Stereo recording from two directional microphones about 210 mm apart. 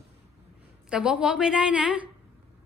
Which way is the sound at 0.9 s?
5° right (ahead or behind).